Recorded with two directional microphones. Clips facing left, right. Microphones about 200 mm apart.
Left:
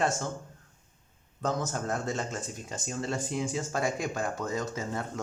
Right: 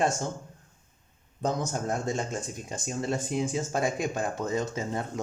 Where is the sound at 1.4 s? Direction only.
15° right (ahead or behind).